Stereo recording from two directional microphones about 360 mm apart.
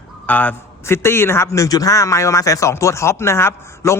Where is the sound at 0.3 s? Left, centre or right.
Centre.